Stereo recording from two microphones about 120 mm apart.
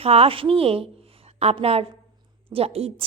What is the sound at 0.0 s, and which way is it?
A woman's voice, 55° right (ahead or behind).